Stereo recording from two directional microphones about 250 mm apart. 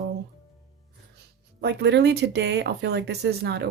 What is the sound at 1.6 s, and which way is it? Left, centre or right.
Speech, right.